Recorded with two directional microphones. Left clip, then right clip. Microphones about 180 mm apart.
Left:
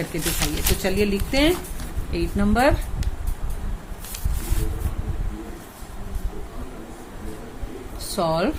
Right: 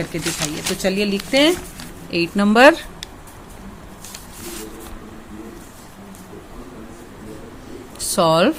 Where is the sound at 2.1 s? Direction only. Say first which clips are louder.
Right 7 dB; 45° right (ahead or behind).